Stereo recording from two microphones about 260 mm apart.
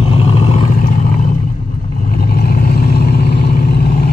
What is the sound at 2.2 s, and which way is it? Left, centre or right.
Vehicle, left.